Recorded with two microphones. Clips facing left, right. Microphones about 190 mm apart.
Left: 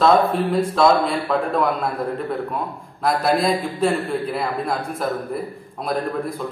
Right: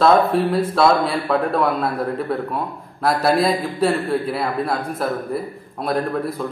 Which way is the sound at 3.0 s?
5° right (ahead or behind).